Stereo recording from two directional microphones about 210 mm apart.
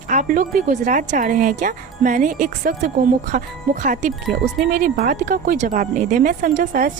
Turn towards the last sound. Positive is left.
turn(degrees=-40)  # may be behind; listen again after turning